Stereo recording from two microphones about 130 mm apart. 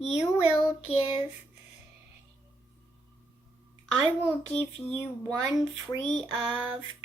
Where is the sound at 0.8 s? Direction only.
45° left (ahead or behind).